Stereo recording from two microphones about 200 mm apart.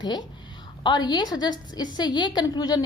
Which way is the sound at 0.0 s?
20° left (ahead or behind).